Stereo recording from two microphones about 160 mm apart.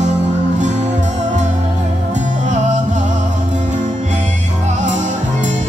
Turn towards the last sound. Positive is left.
turn(degrees=-50)  # may be behind; listen again after turning